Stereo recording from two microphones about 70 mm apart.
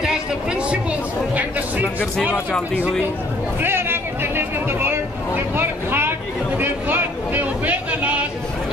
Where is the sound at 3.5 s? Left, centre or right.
Right.